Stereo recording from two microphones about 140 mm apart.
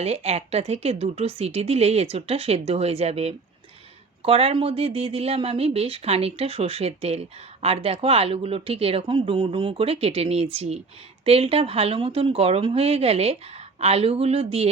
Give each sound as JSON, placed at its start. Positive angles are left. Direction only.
{"t": 0.0, "sound": "speech", "side_deg": -50}